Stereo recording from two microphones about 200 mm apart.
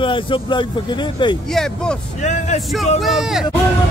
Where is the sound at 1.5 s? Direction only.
Centre (ahead or behind).